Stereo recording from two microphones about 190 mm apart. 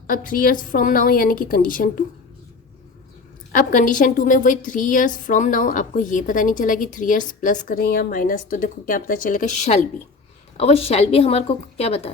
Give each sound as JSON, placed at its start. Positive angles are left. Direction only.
{"t": 0.1, "sound": "a woman's voice", "side_deg": 45}
{"t": 3.5, "sound": "a woman's voice", "side_deg": 45}